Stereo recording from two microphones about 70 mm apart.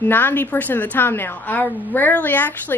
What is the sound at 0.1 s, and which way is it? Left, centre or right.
A woman's voice, left.